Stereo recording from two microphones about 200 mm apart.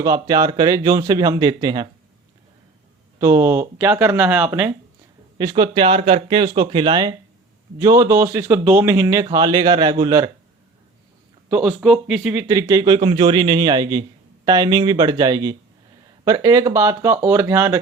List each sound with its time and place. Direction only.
0.0 s speech: 20° right (ahead or behind)
3.2 s speech: 15° right (ahead or behind)
5.4 s speech: 20° right (ahead or behind)
11.4 s speech: 5° right (ahead or behind)